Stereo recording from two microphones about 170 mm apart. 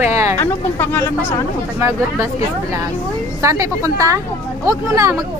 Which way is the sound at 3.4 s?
20° right (ahead or behind).